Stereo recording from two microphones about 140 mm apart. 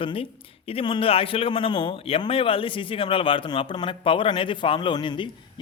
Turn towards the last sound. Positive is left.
turn(degrees=35)  # may be behind; listen again after turning